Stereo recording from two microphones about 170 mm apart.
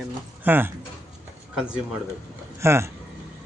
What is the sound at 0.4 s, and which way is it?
Speech, 10° right (ahead or behind).